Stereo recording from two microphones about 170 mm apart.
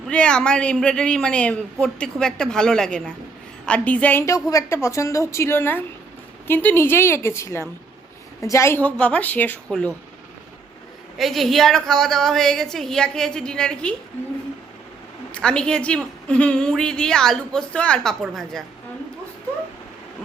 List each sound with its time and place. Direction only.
0.1 s a woman's voice: 5° left (ahead or behind)
11.2 s a woman's voice: centre (ahead or behind)
15.3 s a woman's voice: 5° left (ahead or behind)